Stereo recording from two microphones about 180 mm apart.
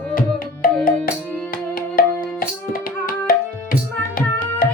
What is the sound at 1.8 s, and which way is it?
Tabla, 50° left (ahead or behind).